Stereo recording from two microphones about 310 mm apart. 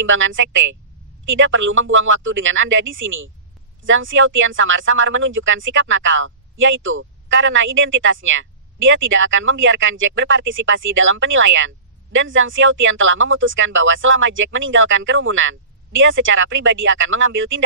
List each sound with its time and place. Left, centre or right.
0.0 s speech: right